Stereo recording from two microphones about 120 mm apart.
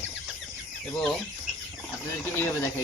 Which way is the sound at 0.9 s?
5° left (ahead or behind).